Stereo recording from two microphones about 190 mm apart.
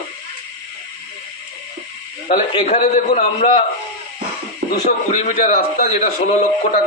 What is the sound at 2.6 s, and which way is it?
Speech, 40° left (ahead or behind).